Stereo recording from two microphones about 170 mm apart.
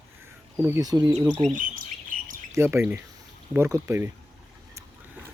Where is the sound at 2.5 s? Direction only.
15° right (ahead or behind).